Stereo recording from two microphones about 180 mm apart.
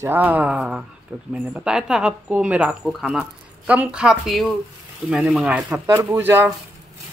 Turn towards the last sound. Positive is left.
turn(degrees=-10)  # may be behind; listen again after turning